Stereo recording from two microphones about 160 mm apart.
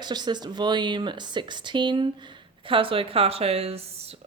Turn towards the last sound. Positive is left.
turn(degrees=-40)  # may be behind; listen again after turning